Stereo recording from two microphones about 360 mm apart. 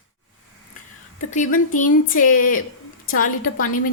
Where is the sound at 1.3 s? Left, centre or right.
Left.